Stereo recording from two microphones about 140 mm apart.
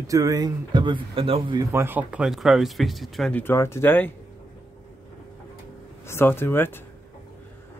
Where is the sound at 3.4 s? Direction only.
20° left (ahead or behind).